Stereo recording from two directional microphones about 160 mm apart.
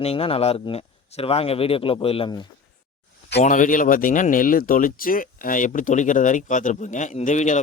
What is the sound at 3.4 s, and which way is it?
Speech, 55° left (ahead or behind).